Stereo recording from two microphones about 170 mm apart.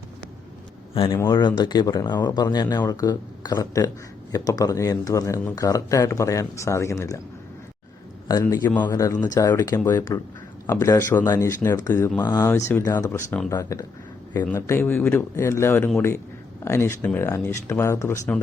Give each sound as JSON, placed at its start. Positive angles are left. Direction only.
{"t": 0.9, "sound": "speech", "side_deg": 30}
{"t": 8.3, "sound": "speech", "side_deg": 20}